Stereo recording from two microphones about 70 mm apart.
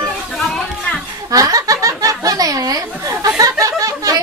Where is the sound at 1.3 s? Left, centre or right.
Right.